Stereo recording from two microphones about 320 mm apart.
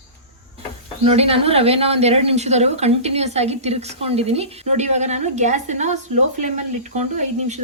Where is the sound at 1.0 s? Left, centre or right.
Centre.